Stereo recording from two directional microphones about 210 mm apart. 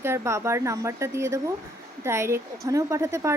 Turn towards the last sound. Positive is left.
turn(degrees=-15)  # may be behind; listen again after turning